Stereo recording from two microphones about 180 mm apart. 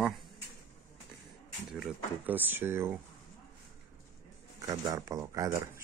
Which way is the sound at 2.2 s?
10° right (ahead or behind).